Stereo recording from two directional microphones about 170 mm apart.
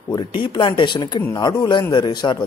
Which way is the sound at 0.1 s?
30° left (ahead or behind).